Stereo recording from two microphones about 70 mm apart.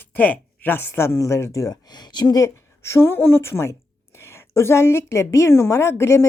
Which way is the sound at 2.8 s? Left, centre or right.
Left.